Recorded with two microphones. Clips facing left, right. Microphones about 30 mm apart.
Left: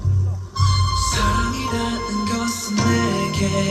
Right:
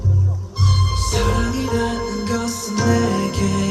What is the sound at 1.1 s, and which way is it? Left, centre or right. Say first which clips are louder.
Music: right 4 dB; left.